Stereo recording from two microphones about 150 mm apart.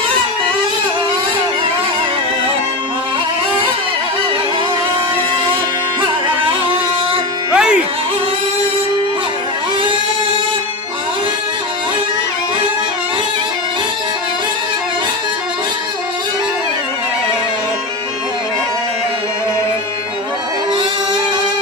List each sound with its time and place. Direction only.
6.0 s music: 35° right (ahead or behind)
7.5 s music: 5° right (ahead or behind)